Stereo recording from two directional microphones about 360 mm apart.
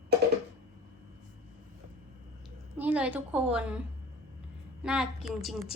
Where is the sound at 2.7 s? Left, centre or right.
Centre.